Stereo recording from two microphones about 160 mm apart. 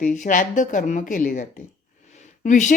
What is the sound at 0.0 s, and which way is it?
A woman's voice, 55° left (ahead or behind).